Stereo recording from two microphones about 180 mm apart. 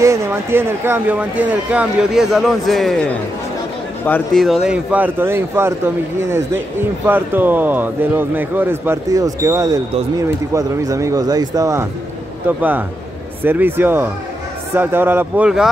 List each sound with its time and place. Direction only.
0.0 s speech: 15° right (ahead or behind)